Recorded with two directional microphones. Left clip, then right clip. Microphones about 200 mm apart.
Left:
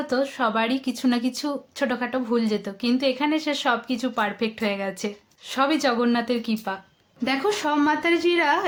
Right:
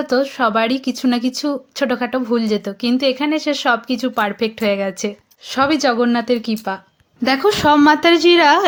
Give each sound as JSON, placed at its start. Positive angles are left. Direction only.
{"t": 0.1, "sound": "speech", "side_deg": -25}